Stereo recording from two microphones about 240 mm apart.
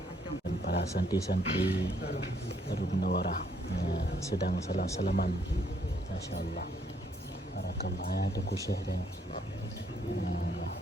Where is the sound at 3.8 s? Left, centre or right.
Left.